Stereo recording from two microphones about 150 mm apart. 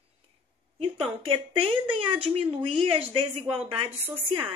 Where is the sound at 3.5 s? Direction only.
10° right (ahead or behind).